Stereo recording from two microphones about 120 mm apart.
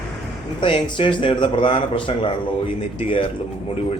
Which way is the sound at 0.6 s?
45° left (ahead or behind).